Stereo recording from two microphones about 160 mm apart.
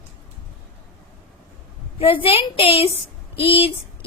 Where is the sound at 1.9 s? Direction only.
35° left (ahead or behind).